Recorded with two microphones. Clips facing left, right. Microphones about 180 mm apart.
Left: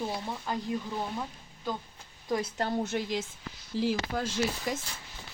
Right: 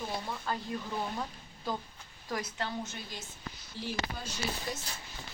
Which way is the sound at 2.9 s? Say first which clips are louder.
Left 13 dB; 85° left.